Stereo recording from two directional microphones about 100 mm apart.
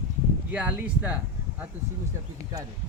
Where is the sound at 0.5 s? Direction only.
15° right (ahead or behind).